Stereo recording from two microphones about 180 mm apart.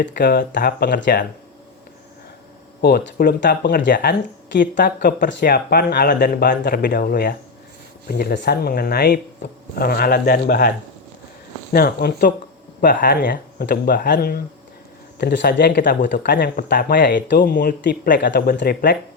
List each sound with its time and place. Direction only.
0.0 s speech: 65° left (ahead or behind)
2.8 s speech: 60° left (ahead or behind)
11.7 s speech: 55° left (ahead or behind)
18.3 s speech: 70° left (ahead or behind)